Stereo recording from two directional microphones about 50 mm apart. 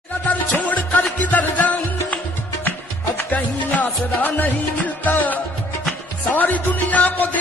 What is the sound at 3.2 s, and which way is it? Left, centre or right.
Music, left.